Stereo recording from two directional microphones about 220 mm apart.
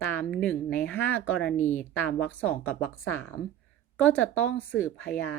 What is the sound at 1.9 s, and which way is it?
A woman's voice, 10° left (ahead or behind).